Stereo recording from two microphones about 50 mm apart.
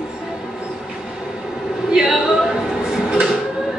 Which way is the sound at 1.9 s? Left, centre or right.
Centre.